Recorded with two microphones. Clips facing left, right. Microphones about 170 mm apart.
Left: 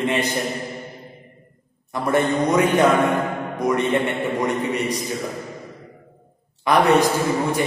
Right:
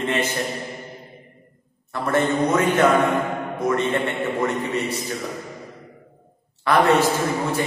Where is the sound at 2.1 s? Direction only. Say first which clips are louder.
Left 1 dB; 15° left (ahead or behind).